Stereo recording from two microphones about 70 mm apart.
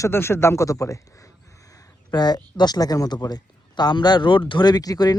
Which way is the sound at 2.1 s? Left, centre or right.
Left.